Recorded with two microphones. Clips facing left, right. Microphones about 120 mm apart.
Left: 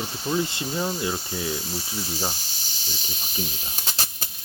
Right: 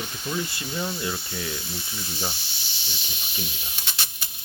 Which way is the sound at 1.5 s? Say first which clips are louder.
Left 4 dB; 40° left (ahead or behind).